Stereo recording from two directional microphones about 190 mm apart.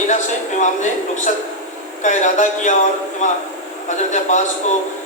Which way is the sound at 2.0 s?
40° left (ahead or behind).